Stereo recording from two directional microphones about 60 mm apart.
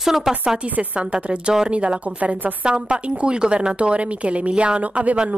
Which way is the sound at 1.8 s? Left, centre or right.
Right.